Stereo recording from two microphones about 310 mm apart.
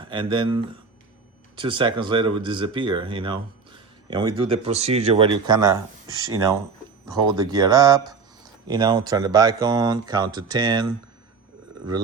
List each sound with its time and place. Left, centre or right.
0.0 s speech: centre